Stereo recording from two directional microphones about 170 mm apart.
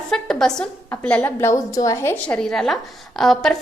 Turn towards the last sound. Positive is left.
turn(degrees=0)  # may be behind; listen again after turning